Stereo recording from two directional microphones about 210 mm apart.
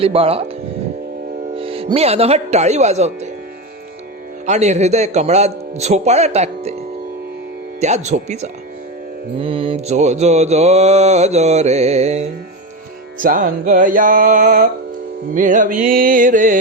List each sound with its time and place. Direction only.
0.0 s speech: 25° right (ahead or behind)
1.5 s speech: 25° right (ahead or behind)
4.4 s mantra: 35° right (ahead or behind)
7.8 s mantra: 35° right (ahead or behind)